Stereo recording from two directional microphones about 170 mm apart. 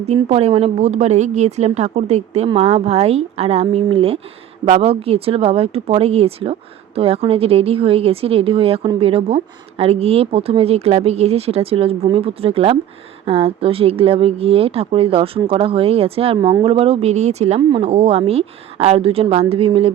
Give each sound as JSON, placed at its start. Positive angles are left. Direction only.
{"t": 0.0, "sound": "speech", "side_deg": -40}